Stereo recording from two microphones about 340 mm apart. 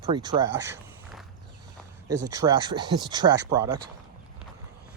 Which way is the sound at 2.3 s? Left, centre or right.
Centre.